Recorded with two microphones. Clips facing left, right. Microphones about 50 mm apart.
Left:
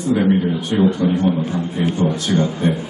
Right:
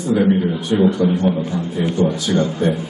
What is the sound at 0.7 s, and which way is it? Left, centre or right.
Speech, left.